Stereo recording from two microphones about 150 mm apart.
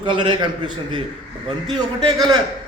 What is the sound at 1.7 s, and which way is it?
Speech, 30° right (ahead or behind).